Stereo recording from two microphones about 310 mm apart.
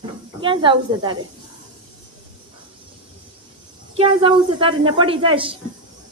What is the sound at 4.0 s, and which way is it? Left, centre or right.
Speech, centre.